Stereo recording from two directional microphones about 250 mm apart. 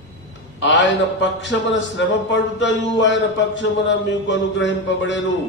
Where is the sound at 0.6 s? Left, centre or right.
Left.